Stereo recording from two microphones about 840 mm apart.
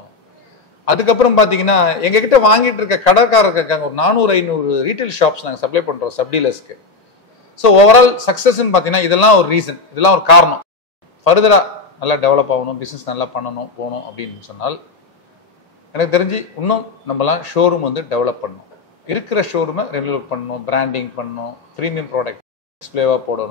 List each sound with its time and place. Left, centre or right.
0.8 s a man's voice: left
15.9 s a man's voice: left